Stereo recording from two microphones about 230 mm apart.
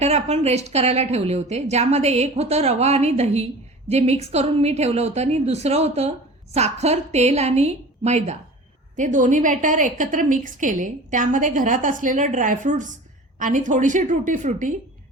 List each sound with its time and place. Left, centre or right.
0.0 s a woman's voice: right